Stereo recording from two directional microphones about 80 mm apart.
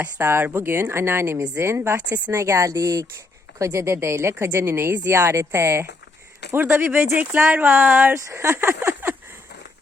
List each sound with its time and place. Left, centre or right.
0.2 s speech: right
2.0 s speech: centre
2.3 s speech: right
8.1 s speech: right